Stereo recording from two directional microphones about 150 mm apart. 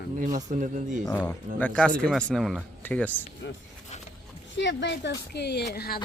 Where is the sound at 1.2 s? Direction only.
10° left (ahead or behind).